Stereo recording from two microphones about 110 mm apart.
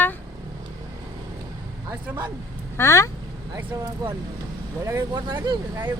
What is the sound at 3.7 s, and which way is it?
Speech, 35° right (ahead or behind).